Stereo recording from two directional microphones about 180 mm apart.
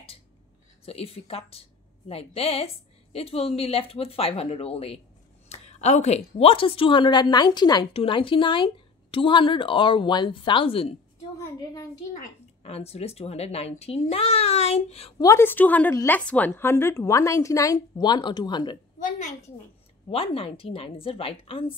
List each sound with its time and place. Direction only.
0.8 s a woman's voice: 35° left (ahead or behind)
11.3 s a woman's voice: 20° left (ahead or behind)
12.6 s a woman's voice: 35° left (ahead or behind)
15.2 s a woman's voice: 15° left (ahead or behind)
18.9 s a woman's voice: 45° left (ahead or behind)
20.1 s a woman's voice: 30° left (ahead or behind)